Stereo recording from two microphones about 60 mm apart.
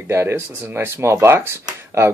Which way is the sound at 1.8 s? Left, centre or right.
Right.